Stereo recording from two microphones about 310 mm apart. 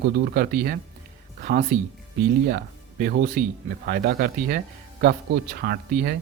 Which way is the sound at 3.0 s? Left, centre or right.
Right.